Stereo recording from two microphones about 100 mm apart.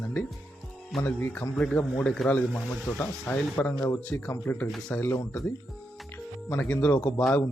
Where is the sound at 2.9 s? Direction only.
20° left (ahead or behind).